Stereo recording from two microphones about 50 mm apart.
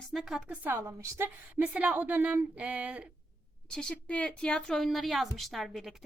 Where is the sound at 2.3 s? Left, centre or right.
Right.